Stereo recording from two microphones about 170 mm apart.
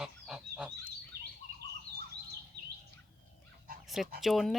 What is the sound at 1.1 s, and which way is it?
Chirp, 65° right (ahead or behind).